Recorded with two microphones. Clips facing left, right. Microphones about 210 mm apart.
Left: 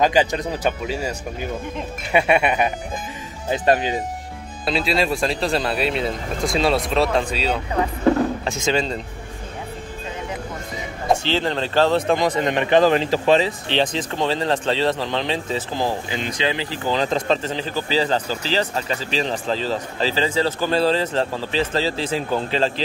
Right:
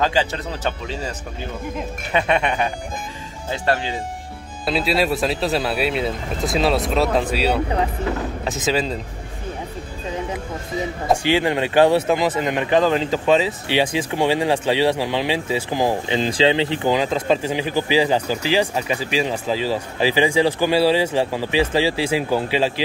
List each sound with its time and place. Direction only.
0.0 s speech: 15° left (ahead or behind)
4.6 s speech: centre (ahead or behind)
8.5 s speech: 5° right (ahead or behind)
11.2 s speech: 10° right (ahead or behind)
16.1 s speech: 30° right (ahead or behind)
16.9 s speech: 10° right (ahead or behind)